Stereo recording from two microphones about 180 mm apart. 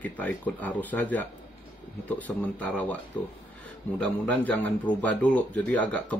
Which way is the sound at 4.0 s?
10° left (ahead or behind).